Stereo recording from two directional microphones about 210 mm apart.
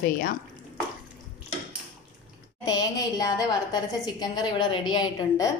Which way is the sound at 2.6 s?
20° left (ahead or behind).